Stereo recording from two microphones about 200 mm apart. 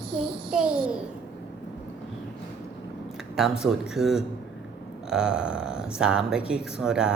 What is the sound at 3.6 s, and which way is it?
Speech, centre (ahead or behind).